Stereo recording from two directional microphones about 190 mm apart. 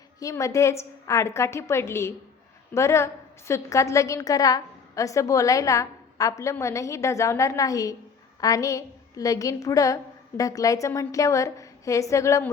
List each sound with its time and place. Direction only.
0.2 s a woman's voice: 15° left (ahead or behind)